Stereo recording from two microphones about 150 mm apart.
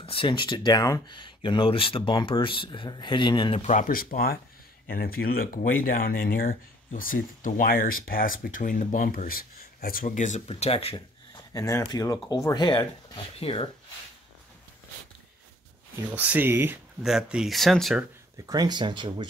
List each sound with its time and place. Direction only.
0.0 s speech: 35° left (ahead or behind)
3.6 s speech: 60° left (ahead or behind); by 11.4 s 40° left (ahead or behind)
11.5 s speech: 20° left (ahead or behind); by 13.7 s 35° left (ahead or behind)
16.2 s speech: 10° right (ahead or behind)
17.0 s speech: 5° right (ahead or behind)
18.5 s speech: 30° right (ahead or behind)